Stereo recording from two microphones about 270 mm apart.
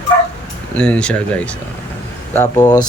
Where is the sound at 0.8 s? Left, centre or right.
Centre.